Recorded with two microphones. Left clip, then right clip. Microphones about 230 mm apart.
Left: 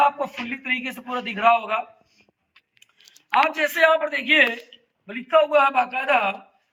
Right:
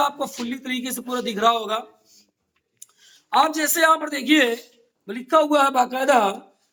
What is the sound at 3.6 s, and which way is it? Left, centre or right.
A man's voice, centre.